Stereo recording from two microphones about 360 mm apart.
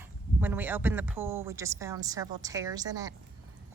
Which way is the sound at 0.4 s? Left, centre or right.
Centre.